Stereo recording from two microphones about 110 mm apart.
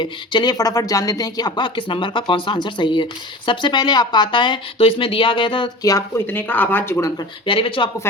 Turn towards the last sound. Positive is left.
turn(degrees=50)  # may be behind; listen again after turning